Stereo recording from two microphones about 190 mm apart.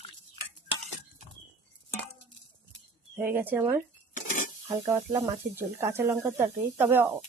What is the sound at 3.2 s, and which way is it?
Speech, 10° right (ahead or behind).